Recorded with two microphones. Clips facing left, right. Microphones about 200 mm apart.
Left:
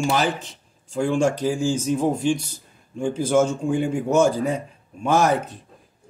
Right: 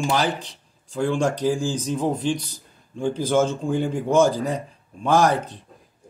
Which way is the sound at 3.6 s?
Centre (ahead or behind).